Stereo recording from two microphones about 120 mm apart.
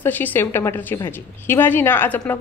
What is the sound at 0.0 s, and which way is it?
Speech, 15° left (ahead or behind).